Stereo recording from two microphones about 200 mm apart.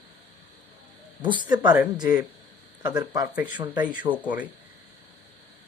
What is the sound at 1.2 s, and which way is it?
Speech, 25° right (ahead or behind).